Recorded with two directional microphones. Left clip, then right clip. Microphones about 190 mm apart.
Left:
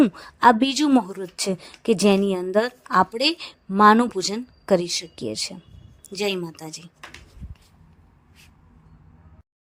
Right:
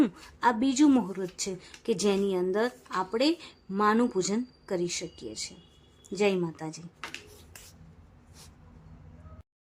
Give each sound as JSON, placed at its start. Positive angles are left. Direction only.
{"t": 0.0, "sound": "a woman's voice", "side_deg": 35}